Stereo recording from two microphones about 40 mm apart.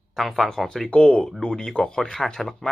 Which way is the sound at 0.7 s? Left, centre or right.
Centre.